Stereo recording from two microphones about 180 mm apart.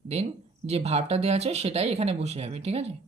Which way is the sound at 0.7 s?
35° right (ahead or behind).